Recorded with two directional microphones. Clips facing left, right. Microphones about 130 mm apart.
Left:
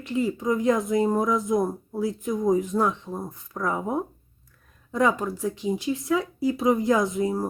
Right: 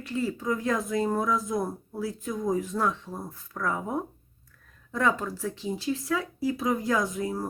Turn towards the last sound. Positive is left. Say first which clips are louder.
# left 5 dB
turn(degrees=25)  # may be behind; listen again after turning